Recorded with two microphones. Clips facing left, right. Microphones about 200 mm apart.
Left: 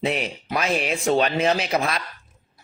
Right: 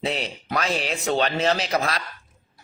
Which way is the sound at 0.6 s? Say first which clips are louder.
Left 3 dB; 30° right (ahead or behind).